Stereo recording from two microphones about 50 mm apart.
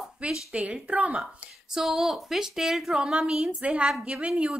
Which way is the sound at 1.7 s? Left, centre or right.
Centre.